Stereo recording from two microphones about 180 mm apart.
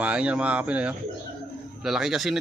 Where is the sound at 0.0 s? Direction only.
5° right (ahead or behind).